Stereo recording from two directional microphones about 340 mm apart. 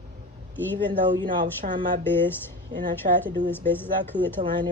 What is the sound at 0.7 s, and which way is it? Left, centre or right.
A woman's voice, centre.